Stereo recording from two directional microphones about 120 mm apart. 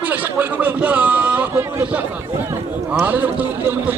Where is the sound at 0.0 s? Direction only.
15° right (ahead or behind).